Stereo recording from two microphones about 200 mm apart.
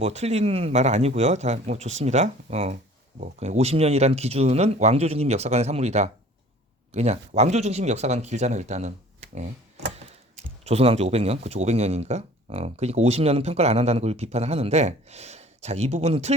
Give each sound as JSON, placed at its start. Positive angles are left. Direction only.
{"t": 0.0, "sound": "speech", "side_deg": -30}
{"t": 10.7, "sound": "speech", "side_deg": -30}